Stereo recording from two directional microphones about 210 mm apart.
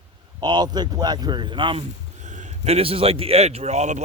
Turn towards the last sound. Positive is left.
turn(degrees=-35)  # may be behind; listen again after turning